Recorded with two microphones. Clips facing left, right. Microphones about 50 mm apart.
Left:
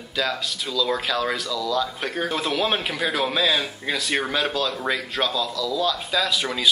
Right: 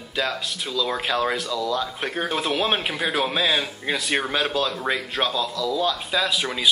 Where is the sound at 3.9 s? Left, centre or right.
Centre.